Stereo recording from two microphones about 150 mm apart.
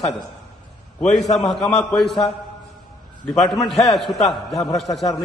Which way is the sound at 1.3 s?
Centre (ahead or behind).